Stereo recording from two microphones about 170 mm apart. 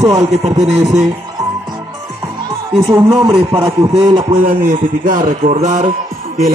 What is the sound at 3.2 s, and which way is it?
A man's voice, 20° right (ahead or behind).